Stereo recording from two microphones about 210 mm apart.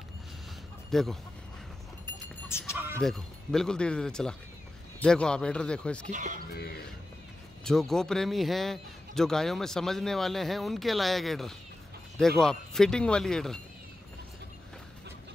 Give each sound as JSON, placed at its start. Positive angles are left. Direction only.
{"t": 0.9, "sound": "a man's voice", "side_deg": 0}
{"t": 2.7, "sound": "a man's voice", "side_deg": 0}
{"t": 6.0, "sound": "speech", "side_deg": -40}
{"t": 7.6, "sound": "a man's voice", "side_deg": 0}